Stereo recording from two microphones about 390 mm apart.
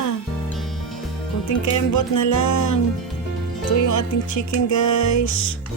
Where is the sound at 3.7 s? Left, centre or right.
Left.